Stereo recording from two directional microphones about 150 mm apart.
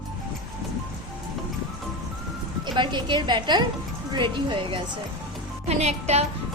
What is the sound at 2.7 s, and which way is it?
A woman's voice, 30° right (ahead or behind).